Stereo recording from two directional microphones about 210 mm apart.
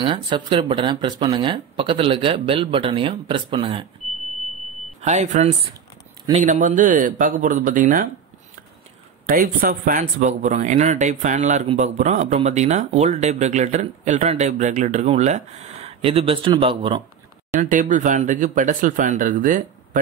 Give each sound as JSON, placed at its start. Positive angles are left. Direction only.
{"t": 0.0, "sound": "speech", "side_deg": -25}
{"t": 5.0, "sound": "speech", "side_deg": -35}
{"t": 9.3, "sound": "speech", "side_deg": -45}
{"t": 17.6, "sound": "speech", "side_deg": -40}